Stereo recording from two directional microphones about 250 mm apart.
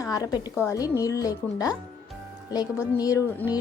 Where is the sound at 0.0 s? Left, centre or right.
Centre.